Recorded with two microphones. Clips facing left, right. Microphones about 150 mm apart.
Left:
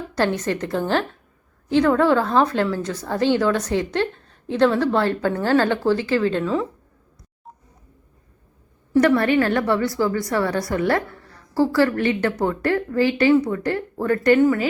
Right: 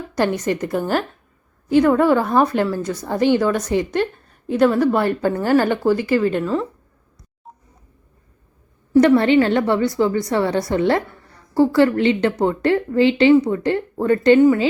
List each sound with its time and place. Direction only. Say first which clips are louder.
0.1 s a woman's voice: right 2 dB; 15° right (ahead or behind)
7.5 s telephone dialing: right 1 dB; centre (ahead or behind)
8.9 s a woman's voice: right 4 dB; 20° right (ahead or behind)